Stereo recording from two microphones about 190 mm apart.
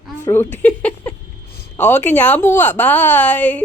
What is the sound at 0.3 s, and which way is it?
Speech, 10° left (ahead or behind).